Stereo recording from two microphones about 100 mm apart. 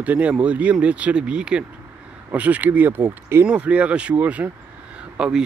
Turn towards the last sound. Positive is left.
turn(degrees=-10)  # may be behind; listen again after turning